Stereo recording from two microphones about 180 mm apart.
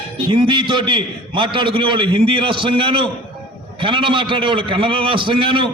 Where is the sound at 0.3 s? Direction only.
25° right (ahead or behind).